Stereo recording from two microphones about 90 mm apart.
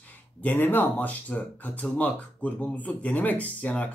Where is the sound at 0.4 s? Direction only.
20° left (ahead or behind).